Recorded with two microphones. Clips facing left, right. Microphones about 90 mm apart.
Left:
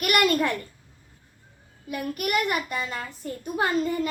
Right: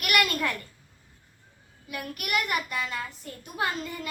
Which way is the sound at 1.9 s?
40° left (ahead or behind).